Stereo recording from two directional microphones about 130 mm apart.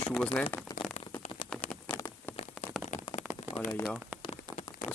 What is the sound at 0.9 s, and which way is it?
Rain on surface, 55° left (ahead or behind).